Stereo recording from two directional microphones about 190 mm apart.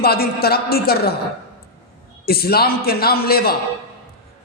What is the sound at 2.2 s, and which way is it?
A man's voice, 55° left (ahead or behind).